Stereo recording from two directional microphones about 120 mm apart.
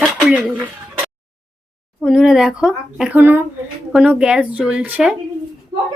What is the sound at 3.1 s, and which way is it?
Speech, 15° right (ahead or behind).